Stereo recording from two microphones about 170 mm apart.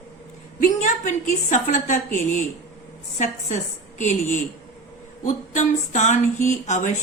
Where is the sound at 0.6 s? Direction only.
45° left (ahead or behind).